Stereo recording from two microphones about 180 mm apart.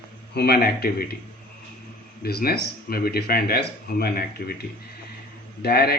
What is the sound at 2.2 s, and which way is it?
Speech, 60° left (ahead or behind).